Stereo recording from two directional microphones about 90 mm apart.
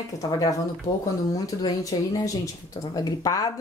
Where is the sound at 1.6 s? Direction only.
45° left (ahead or behind).